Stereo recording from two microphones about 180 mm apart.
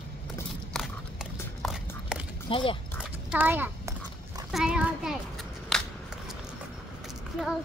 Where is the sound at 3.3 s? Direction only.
10° right (ahead or behind).